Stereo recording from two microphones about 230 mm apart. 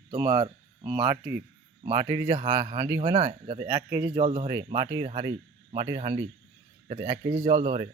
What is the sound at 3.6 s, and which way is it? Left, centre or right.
Speech, centre.